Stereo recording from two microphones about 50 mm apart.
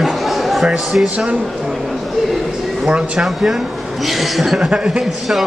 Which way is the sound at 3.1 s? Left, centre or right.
Centre.